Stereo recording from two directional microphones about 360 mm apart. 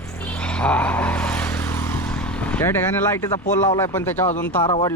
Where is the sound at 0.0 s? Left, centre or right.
Centre.